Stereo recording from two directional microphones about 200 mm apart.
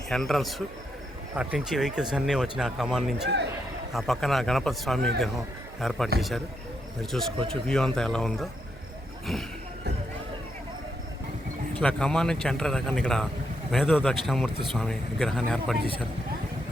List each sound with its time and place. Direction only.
0.1 s speech: centre (ahead or behind)
3.2 s a man's voice: 60° right (ahead or behind)
3.9 s speech: centre (ahead or behind)
11.8 s speech: 5° left (ahead or behind)